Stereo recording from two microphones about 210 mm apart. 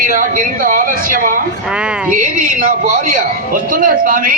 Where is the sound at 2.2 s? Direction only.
40° right (ahead or behind).